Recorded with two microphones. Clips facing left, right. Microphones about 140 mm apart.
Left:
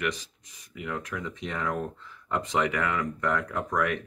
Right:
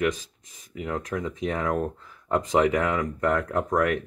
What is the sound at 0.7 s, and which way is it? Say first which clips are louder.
Speech: right 4 dB; 40° right (ahead or behind).